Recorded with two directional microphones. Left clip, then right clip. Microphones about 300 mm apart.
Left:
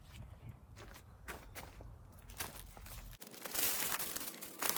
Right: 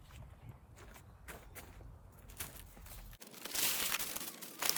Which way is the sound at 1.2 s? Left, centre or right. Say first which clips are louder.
Left 3 dB; centre.